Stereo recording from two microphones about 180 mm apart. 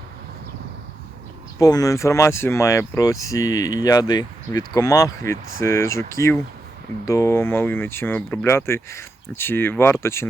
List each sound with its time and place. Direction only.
1.5 s speech: 20° left (ahead or behind)